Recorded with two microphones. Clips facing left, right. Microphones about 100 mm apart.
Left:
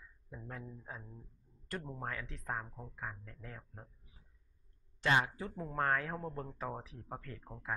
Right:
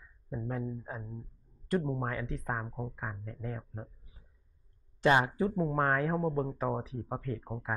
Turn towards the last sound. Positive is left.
turn(degrees=-25)  # may be behind; listen again after turning